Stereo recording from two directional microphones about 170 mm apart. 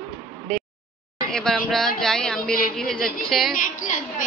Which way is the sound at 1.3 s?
5° left (ahead or behind).